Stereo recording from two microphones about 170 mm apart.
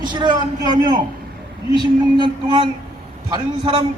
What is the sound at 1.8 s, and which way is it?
Speech, 25° right (ahead or behind).